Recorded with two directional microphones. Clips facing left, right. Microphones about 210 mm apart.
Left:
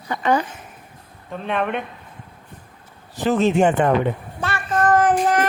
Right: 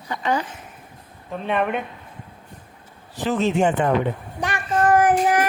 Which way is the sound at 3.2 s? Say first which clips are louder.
Left 3 dB; 50° left (ahead or behind).